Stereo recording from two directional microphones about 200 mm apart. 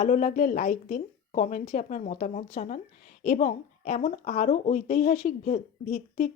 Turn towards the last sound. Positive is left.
turn(degrees=35)  # may be behind; listen again after turning